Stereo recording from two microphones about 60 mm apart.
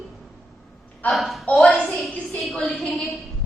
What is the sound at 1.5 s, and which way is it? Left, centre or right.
Speech, left.